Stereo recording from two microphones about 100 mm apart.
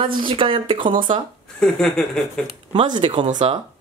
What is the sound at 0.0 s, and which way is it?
A woman's voice, 60° right (ahead or behind).